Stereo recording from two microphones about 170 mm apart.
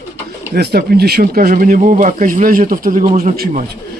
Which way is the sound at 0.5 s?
70° right (ahead or behind).